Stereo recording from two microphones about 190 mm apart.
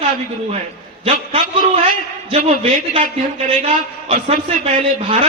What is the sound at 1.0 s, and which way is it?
A man's voice, 30° right (ahead or behind).